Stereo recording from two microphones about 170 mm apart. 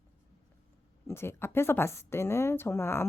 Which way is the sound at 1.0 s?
15° left (ahead or behind).